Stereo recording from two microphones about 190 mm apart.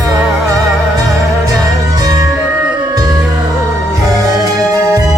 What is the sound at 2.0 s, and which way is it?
Music, 20° right (ahead or behind).